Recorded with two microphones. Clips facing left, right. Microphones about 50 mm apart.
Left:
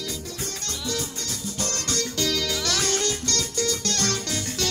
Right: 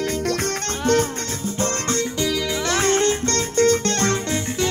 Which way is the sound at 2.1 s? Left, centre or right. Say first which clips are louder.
Right 3 dB; centre.